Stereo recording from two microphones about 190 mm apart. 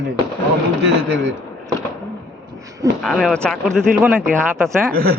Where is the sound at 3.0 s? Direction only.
Centre (ahead or behind).